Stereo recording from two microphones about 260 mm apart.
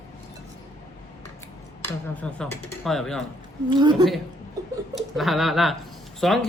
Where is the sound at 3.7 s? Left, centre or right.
Centre.